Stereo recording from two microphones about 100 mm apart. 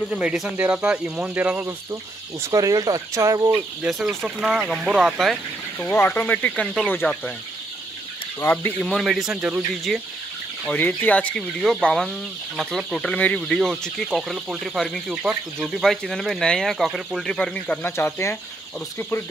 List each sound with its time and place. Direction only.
0.2 s speech: 5° right (ahead or behind)
2.4 s speech: 35° right (ahead or behind)
3.8 s speech: 5° right (ahead or behind)
5.8 s speech: 20° left (ahead or behind)
8.5 s speech: 15° left (ahead or behind)
9.0 s speech: 5° right (ahead or behind)
10.7 s speech: 15° left (ahead or behind)
17.8 s speech: 25° left (ahead or behind)